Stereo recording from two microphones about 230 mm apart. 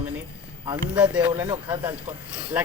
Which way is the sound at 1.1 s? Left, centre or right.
Centre.